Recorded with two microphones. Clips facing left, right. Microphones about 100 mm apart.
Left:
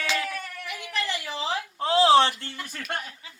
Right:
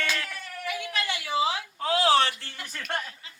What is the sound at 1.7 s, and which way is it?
Speech, 25° left (ahead or behind).